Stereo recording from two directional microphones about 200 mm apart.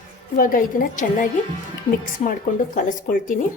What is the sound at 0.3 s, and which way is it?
Speech, 45° left (ahead or behind).